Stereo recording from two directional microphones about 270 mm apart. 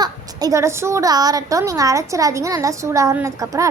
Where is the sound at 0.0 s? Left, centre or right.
Centre.